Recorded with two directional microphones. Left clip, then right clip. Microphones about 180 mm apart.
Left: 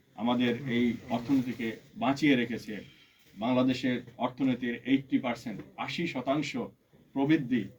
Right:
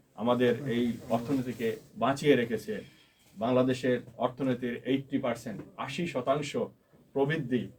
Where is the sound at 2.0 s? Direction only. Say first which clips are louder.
Right 1 dB; 35° right (ahead or behind).